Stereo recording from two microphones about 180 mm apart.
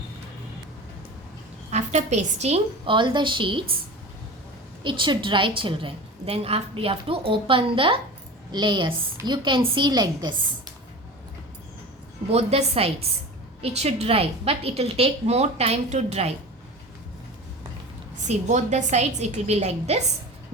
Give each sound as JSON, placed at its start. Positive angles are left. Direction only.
{"t": 1.7, "sound": "a woman's voice", "side_deg": -40}
{"t": 4.8, "sound": "a woman's voice", "side_deg": -25}
{"t": 12.3, "sound": "a woman's voice", "side_deg": -35}
{"t": 18.3, "sound": "a woman's voice", "side_deg": -40}